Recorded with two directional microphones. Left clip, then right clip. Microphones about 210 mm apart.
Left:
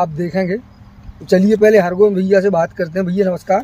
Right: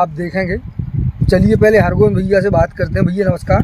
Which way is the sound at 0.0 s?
10° left (ahead or behind).